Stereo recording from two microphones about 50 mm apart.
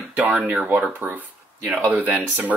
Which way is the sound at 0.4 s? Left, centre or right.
Centre.